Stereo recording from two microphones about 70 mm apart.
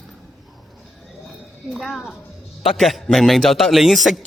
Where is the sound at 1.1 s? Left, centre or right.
Centre.